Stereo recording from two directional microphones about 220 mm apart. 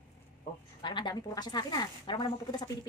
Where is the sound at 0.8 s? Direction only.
20° left (ahead or behind).